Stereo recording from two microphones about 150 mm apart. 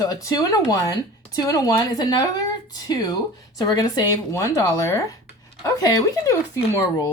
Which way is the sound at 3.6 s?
25° left (ahead or behind).